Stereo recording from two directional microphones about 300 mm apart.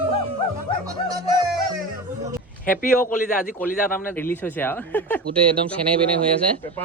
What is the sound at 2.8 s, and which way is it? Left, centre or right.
Speech, left.